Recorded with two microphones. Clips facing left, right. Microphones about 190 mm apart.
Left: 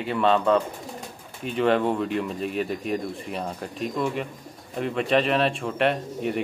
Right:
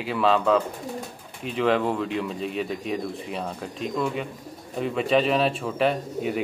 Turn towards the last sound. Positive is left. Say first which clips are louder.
# even
turn(degrees=0)  # may be behind; listen again after turning